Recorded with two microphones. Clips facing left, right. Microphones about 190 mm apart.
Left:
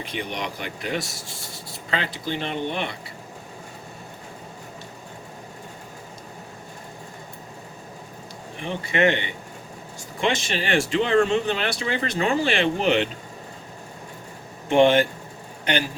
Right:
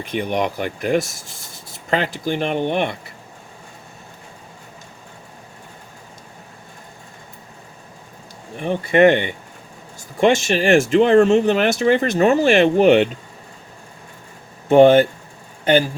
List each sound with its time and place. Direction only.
0.0 s speech: 50° right (ahead or behind)
8.6 s speech: 50° right (ahead or behind)
14.7 s speech: 40° right (ahead or behind)